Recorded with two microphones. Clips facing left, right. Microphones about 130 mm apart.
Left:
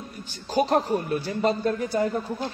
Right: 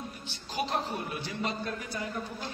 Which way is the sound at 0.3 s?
45° left (ahead or behind).